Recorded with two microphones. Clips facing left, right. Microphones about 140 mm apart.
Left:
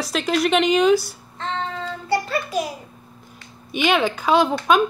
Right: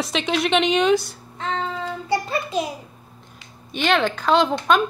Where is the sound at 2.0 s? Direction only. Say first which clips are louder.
Left 2 dB; 20° right (ahead or behind).